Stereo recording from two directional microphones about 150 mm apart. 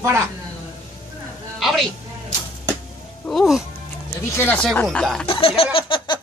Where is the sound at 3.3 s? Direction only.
Centre (ahead or behind).